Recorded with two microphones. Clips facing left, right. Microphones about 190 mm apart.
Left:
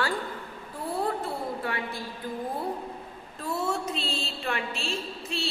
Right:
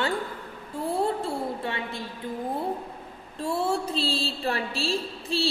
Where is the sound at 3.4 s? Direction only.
30° right (ahead or behind).